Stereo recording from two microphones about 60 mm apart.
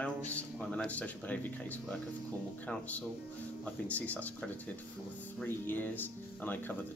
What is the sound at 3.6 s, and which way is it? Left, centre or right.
Speech, left.